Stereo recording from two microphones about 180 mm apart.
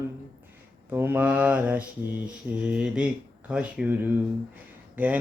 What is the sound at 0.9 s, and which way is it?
Speech, 15° right (ahead or behind).